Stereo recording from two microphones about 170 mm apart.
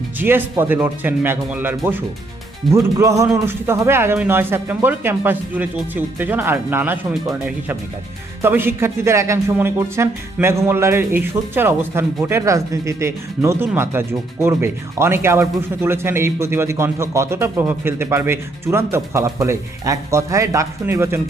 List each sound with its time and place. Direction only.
0.2 s speech: 10° right (ahead or behind)